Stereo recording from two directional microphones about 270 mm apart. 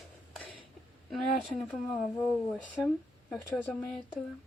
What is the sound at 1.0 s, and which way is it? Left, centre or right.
Speech, centre.